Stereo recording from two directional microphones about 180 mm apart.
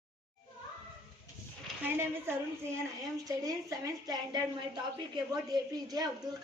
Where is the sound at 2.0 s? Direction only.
15° right (ahead or behind).